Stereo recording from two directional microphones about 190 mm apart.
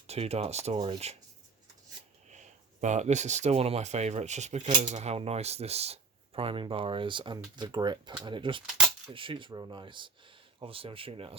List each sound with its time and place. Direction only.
0.1 s speech: 35° right (ahead or behind)
2.3 s speech: 40° right (ahead or behind)